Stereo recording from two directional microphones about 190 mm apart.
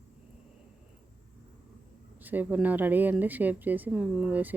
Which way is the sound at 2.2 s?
10° right (ahead or behind).